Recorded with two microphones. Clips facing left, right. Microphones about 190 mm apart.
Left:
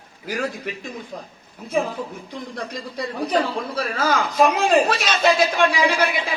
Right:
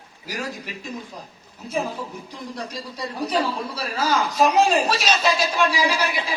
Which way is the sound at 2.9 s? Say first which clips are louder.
Left 3 dB; 55° left (ahead or behind).